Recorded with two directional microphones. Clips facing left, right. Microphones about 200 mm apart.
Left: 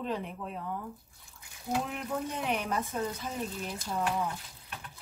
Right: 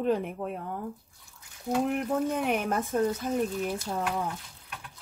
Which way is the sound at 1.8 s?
55° right (ahead or behind).